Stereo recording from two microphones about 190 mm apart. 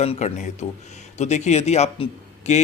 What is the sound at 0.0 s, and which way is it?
Speech, 35° left (ahead or behind).